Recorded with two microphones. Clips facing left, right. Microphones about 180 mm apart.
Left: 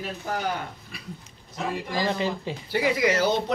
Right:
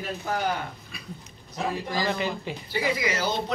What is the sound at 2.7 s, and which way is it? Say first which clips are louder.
Speech: left 4 dB; 65° left (ahead or behind).